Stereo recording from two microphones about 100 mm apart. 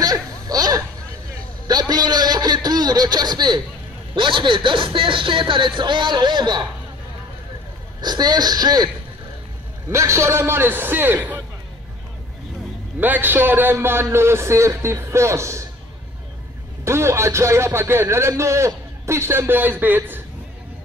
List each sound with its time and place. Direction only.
0.0 s a sound: 40° right (ahead or behind)
4.1 s speech: 55° right (ahead or behind)
8.0 s speech: 45° right (ahead or behind)
9.8 s a man's voice: 30° right (ahead or behind)
13.0 s a man's voice: 20° right (ahead or behind)
16.8 s a man's voice: 25° right (ahead or behind)